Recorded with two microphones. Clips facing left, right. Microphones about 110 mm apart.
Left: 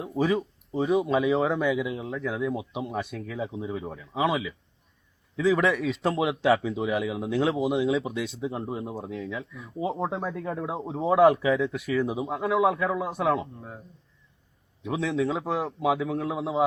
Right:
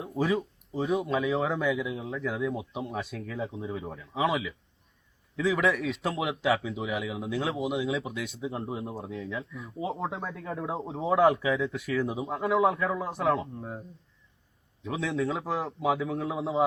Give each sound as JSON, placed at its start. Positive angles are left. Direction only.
{"t": 0.0, "sound": "a man's voice", "side_deg": 0}
{"t": 8.0, "sound": "speech", "side_deg": 25}
{"t": 8.6, "sound": "a man's voice", "side_deg": 0}
{"t": 14.9, "sound": "a man's voice", "side_deg": 0}